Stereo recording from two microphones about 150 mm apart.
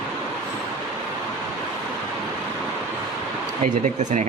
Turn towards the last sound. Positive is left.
turn(degrees=-55)  # may be behind; listen again after turning